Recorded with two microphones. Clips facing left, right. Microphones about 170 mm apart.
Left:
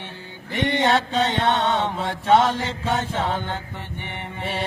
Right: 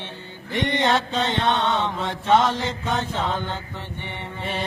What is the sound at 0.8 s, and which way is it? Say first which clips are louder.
Mantra: left 3 dB; 15° left (ahead or behind).